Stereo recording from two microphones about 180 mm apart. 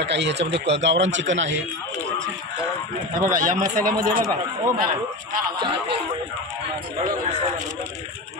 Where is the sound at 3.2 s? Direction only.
45° right (ahead or behind).